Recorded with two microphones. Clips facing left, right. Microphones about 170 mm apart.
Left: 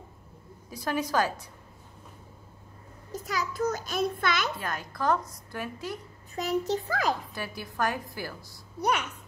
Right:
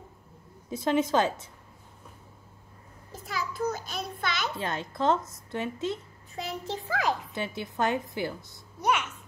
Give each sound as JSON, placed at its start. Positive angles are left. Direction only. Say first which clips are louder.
{"t": 0.7, "sound": "a woman's voice", "louder": "right 5 dB", "side_deg": -25}
{"t": 3.3, "sound": "a sound", "louder": "left 2 dB", "side_deg": 45}
{"t": 3.7, "sound": "child singing", "louder": "left 7 dB", "side_deg": 50}
{"t": 4.6, "sound": "a woman's voice", "louder": "right 3 dB", "side_deg": -25}
{"t": 6.3, "sound": "a child's voice", "louder": "left 7 dB", "side_deg": 45}
{"t": 7.3, "sound": "a woman's voice", "louder": "right 2 dB", "side_deg": -25}